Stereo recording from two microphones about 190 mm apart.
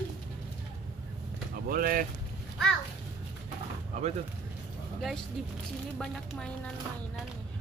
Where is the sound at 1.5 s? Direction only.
50° right (ahead or behind).